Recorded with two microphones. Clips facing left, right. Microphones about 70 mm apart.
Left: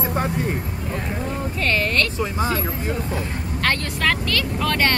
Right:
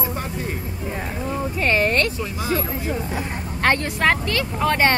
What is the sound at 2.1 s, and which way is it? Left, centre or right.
Speech, left.